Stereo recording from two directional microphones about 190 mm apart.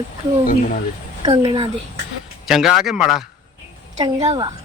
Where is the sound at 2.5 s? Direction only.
Centre (ahead or behind).